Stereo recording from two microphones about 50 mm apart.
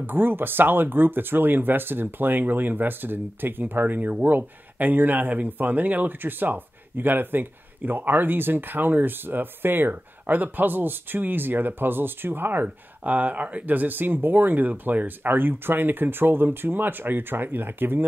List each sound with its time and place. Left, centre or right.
0.0 s speech: right